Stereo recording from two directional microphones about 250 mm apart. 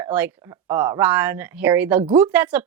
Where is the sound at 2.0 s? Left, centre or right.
Right.